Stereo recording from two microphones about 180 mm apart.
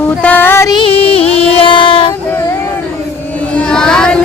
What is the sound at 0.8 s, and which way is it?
Music, 30° left (ahead or behind).